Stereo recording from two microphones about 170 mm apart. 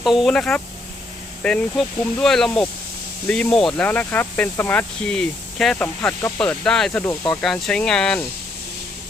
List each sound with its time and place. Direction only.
0.0 s speech: centre (ahead or behind)